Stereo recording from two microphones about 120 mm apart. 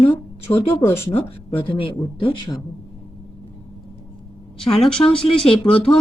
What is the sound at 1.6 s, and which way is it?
Speech, 50° left (ahead or behind).